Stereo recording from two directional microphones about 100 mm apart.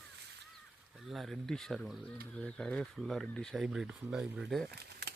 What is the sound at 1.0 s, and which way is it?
Speech, centre (ahead or behind).